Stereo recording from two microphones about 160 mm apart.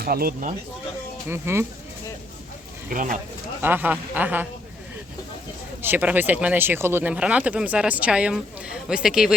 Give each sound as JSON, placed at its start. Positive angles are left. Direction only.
{"t": 0.0, "sound": "speech", "side_deg": -70}
{"t": 1.3, "sound": "speech", "side_deg": -15}
{"t": 2.9, "sound": "speech", "side_deg": -55}
{"t": 3.6, "sound": "speech", "side_deg": -10}
{"t": 5.8, "sound": "speech", "side_deg": -10}